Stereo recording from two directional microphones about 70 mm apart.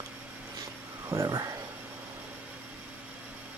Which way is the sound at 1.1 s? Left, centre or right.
Right.